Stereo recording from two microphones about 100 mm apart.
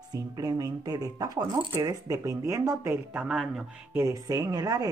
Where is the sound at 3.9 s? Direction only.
25° right (ahead or behind).